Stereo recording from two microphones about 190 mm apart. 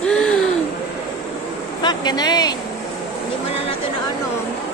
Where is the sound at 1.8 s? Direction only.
20° left (ahead or behind).